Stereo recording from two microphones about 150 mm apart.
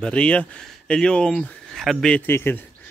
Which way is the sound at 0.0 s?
5° left (ahead or behind).